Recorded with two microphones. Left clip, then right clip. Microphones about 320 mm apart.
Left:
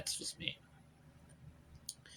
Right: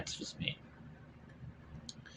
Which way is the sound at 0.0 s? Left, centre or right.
Left.